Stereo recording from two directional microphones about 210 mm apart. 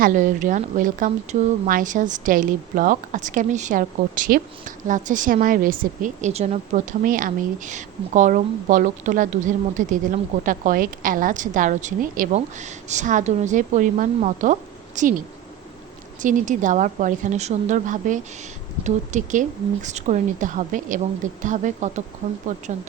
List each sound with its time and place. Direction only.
0.0 s speech: 40° right (ahead or behind)
16.2 s speech: 35° right (ahead or behind)